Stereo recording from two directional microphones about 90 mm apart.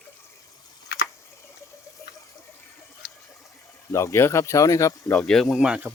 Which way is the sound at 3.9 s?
35° left (ahead or behind).